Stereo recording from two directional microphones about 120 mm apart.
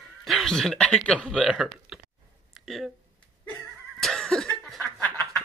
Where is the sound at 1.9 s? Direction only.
5° right (ahead or behind).